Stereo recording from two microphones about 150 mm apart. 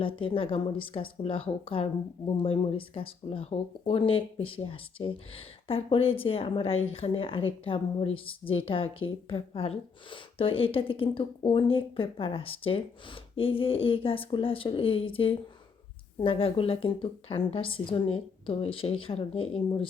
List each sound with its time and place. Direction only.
0.0 s a woman's voice: 35° left (ahead or behind)